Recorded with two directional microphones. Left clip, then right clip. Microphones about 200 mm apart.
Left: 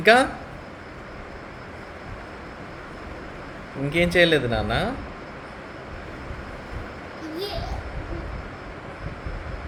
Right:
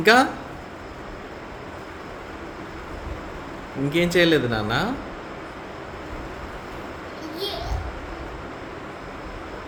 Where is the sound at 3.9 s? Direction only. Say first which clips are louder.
Even; 25° right (ahead or behind).